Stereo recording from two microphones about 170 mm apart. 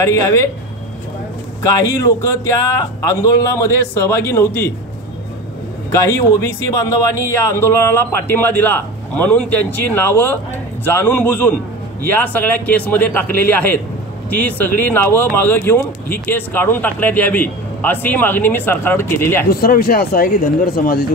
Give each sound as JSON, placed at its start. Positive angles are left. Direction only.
{"t": 0.0, "sound": "speech", "side_deg": 15}
{"t": 1.6, "sound": "speech", "side_deg": 15}
{"t": 5.9, "sound": "speech", "side_deg": 15}
{"t": 19.5, "sound": "speech", "side_deg": 60}